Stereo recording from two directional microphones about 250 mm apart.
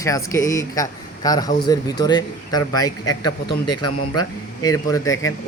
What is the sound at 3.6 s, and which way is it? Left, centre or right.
Speech, left.